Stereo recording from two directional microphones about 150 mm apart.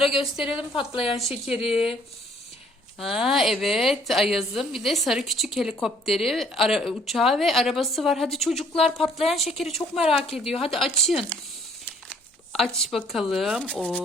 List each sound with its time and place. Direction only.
0.1 s a woman's voice: centre (ahead or behind)
3.0 s a woman's voice: centre (ahead or behind)
12.5 s a woman's voice: centre (ahead or behind)